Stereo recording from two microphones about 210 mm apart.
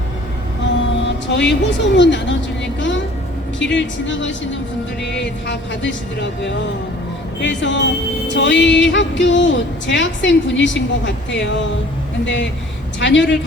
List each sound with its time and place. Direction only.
1.0 s speech: 55° left (ahead or behind)
3.6 s speech: 60° left (ahead or behind)